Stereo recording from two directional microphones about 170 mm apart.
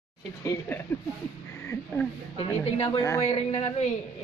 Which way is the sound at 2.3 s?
35° left (ahead or behind).